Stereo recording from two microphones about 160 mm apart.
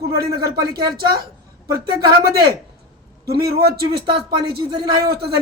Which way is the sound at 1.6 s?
25° right (ahead or behind).